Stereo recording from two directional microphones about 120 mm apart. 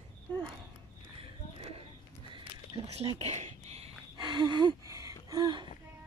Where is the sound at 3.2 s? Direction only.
65° right (ahead or behind).